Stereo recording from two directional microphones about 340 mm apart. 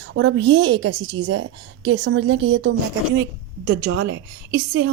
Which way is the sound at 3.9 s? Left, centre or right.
Right.